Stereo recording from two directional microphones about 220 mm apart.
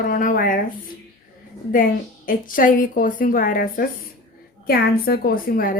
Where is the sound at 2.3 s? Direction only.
40° left (ahead or behind).